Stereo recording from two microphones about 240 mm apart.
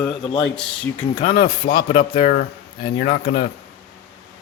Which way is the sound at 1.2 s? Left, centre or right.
Left.